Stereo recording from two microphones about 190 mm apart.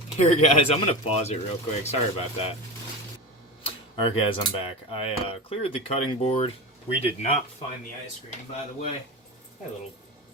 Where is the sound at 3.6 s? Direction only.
25° left (ahead or behind).